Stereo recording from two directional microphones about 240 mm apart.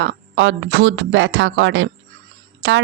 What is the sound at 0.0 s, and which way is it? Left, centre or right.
Speech, right.